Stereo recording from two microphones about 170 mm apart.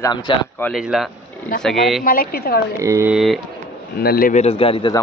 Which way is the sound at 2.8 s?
15° right (ahead or behind).